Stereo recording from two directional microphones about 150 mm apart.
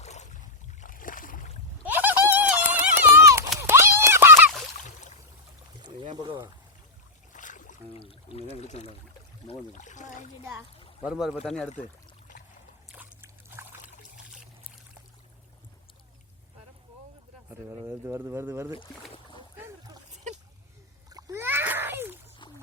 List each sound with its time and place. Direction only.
0.0 s boat: 50° left (ahead or behind)
0.8 s boat: 65° left (ahead or behind)
1.8 s run: 10° right (ahead or behind)
3.6 s clip-clop: 15° right (ahead or behind)
6.1 s pour: 30° right (ahead or behind)
7.3 s boat: 60° left (ahead or behind)
8.4 s pour: 45° left (ahead or behind)
9.5 s speech: 55° left (ahead or behind)
10.4 s speech: 20° right (ahead or behind)
11.0 s speech: 5° right (ahead or behind)
13.2 s trickle: 15° right (ahead or behind)
17.7 s speech: 20° right (ahead or behind)
19.1 s boat: 30° left (ahead or behind)
21.1 s splash: 25° right (ahead or behind)